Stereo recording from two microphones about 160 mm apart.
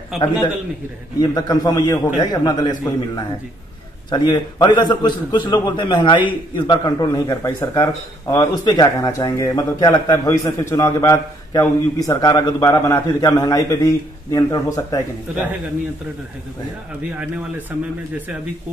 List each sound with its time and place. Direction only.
1.2 s a man's voice: 25° left (ahead or behind)
17.2 s speech: 10° right (ahead or behind)